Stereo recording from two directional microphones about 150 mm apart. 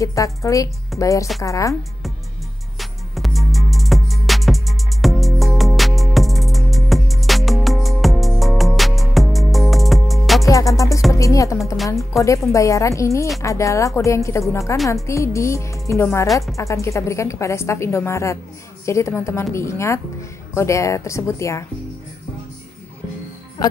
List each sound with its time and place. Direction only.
0.0 s a woman's voice: 20° left (ahead or behind)
2.8 s music: centre (ahead or behind)
10.4 s music: 20° left (ahead or behind)
11.1 s a woman's voice: 20° left (ahead or behind)
23.6 s a woman's voice: 25° left (ahead or behind)